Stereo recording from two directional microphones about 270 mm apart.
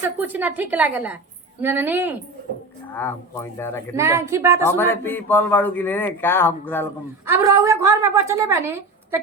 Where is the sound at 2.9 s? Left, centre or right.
Centre.